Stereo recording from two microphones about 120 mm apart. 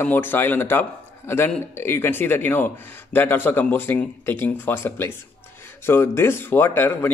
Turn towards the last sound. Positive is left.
turn(degrees=20)  # may be behind; listen again after turning